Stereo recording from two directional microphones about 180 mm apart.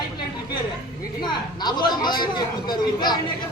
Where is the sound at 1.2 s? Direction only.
25° left (ahead or behind).